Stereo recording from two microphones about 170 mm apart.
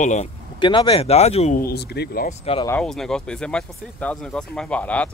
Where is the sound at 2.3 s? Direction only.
35° left (ahead or behind).